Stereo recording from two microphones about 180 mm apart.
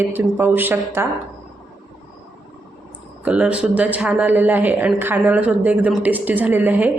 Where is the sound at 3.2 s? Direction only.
5° right (ahead or behind).